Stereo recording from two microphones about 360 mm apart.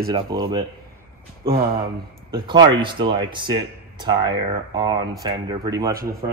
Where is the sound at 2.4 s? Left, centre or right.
Centre.